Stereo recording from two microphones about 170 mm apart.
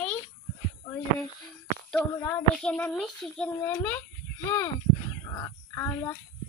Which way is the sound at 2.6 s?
5° left (ahead or behind).